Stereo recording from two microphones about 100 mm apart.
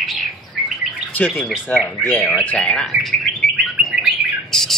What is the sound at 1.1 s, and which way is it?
Speech, 15° left (ahead or behind).